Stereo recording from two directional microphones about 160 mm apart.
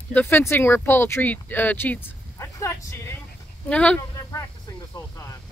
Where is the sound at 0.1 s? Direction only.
10° left (ahead or behind).